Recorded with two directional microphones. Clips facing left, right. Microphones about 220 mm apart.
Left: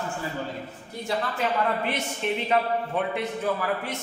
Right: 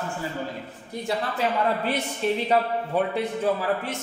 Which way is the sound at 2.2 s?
35° right (ahead or behind).